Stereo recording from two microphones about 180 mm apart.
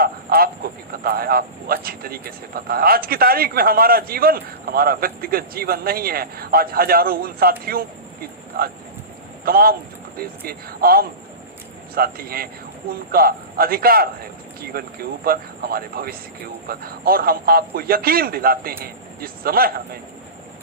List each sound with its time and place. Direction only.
0.0 s a sound: 55° right (ahead or behind)
1.0 s a man's voice: 55° right (ahead or behind)
9.4 s a man's voice: 55° right (ahead or behind)